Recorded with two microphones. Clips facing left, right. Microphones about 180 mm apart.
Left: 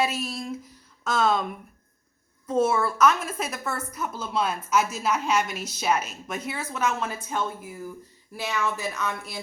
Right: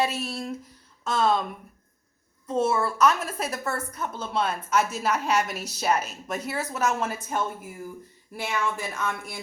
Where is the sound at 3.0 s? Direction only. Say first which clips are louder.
Left 1 dB; 35° right (ahead or behind).